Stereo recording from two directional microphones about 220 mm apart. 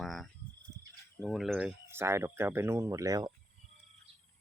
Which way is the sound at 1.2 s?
Centre (ahead or behind).